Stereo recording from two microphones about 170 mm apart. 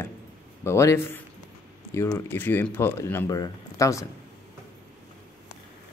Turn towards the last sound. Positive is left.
turn(degrees=20)  # may be behind; listen again after turning